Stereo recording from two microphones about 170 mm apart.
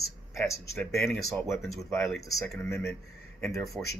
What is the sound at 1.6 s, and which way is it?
Speech, centre (ahead or behind).